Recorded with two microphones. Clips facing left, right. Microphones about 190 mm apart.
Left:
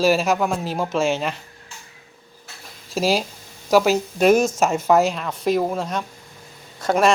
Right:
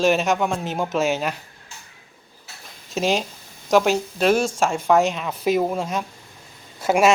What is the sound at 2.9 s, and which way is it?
A man's voice, 5° left (ahead or behind).